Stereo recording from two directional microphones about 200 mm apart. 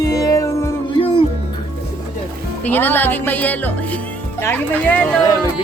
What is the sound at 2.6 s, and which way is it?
Speech, 10° left (ahead or behind).